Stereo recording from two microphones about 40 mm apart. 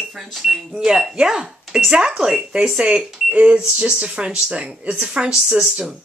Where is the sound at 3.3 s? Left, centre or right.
Right.